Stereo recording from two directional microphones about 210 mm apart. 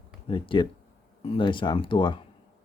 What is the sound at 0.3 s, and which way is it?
Speech, 25° left (ahead or behind).